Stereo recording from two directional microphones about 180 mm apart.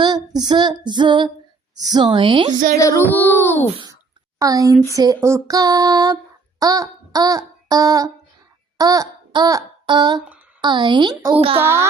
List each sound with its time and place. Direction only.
0.0 s female singing: 25° right (ahead or behind)
2.7 s speech: 15° left (ahead or behind)
4.4 s a woman's voice: 20° right (ahead or behind)
4.9 s female singing: 15° right (ahead or behind)
6.6 s a sound: 20° right (ahead or behind)
8.8 s child singing: 20° right (ahead or behind)
10.2 s a sound: 10° right (ahead or behind)
10.6 s female singing: 25° right (ahead or behind)
11.3 s a child's voice: 30° right (ahead or behind)
11.6 s music: 15° right (ahead or behind)